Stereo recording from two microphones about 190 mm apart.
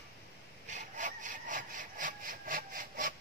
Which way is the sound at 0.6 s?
40° right (ahead or behind).